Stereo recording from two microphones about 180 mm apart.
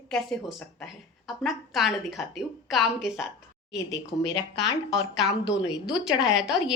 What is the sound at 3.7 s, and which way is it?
Speech, 20° left (ahead or behind).